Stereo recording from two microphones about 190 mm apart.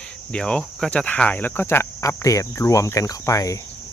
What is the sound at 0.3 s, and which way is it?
Cricket, 5° left (ahead or behind).